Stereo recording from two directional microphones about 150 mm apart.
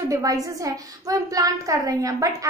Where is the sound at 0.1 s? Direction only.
25° right (ahead or behind).